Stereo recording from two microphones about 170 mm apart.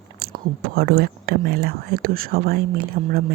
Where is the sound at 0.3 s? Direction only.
65° right (ahead or behind).